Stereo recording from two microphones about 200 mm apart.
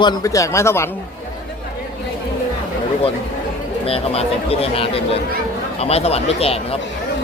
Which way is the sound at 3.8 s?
30° left (ahead or behind).